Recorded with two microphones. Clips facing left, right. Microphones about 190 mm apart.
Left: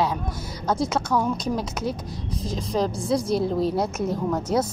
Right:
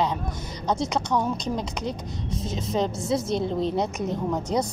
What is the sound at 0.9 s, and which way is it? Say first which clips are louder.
Speech: left 1 dB; 20° right (ahead or behind).